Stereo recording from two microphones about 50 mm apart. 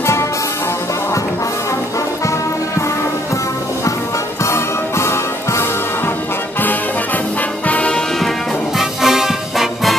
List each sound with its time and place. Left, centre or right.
4.5 s music: left
7.6 s music: left
8.7 s music: centre